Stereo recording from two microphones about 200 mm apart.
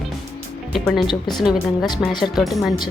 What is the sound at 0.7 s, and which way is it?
Speech, centre (ahead or behind).